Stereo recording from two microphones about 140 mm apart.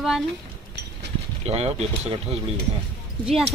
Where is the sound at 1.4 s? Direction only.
50° right (ahead or behind).